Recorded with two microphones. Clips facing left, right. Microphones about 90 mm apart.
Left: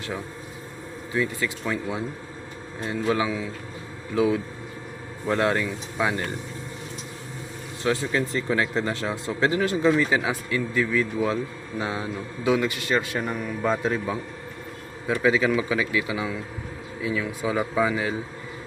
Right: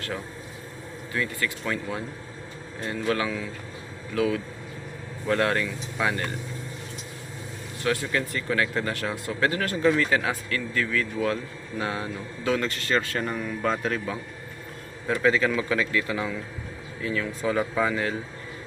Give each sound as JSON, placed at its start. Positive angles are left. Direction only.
{"t": 1.1, "sound": "a man's voice", "side_deg": 20}
{"t": 7.9, "sound": "a man's voice", "side_deg": 20}